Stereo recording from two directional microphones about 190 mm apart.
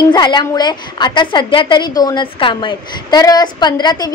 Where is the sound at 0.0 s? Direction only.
20° left (ahead or behind).